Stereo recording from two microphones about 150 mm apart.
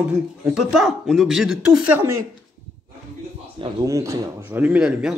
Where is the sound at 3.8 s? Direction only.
20° right (ahead or behind).